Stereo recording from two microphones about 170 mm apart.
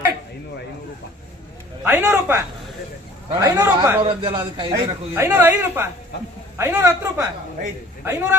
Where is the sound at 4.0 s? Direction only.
30° right (ahead or behind).